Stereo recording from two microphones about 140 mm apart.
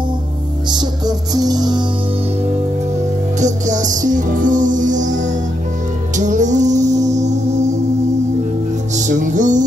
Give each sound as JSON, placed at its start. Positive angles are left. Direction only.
{"t": 0.7, "sound": "music", "side_deg": -30}
{"t": 3.3, "sound": "music", "side_deg": -60}
{"t": 8.9, "sound": "music", "side_deg": -65}